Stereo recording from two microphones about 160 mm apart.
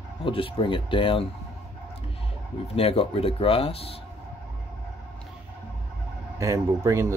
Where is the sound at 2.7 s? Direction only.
35° left (ahead or behind).